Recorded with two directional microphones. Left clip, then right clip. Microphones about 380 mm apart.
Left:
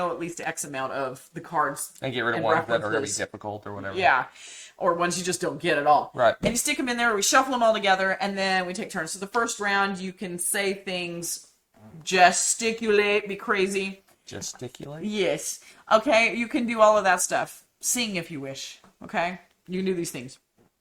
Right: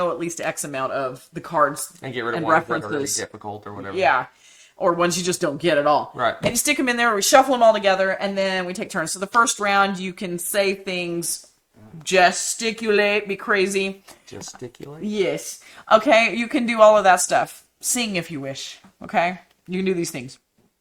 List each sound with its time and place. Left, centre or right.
0.0 s speech: right
2.0 s speech: left
3.3 s speech: left
3.9 s speech: right
4.8 s speech: right
12.0 s speech: centre
15.0 s speech: centre
15.9 s speech: right